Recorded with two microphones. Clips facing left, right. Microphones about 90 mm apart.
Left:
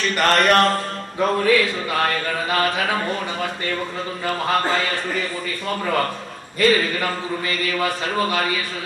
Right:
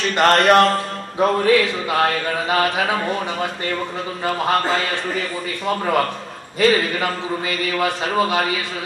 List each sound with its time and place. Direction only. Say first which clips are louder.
0.1 s a man's voice: right 4 dB; 20° right (ahead or behind)
5.7 s a man's voice: right 3 dB; 20° right (ahead or behind)